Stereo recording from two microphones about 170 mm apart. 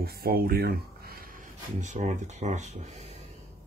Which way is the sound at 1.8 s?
45° right (ahead or behind).